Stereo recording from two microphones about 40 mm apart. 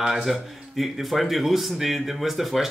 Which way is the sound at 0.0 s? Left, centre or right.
Centre.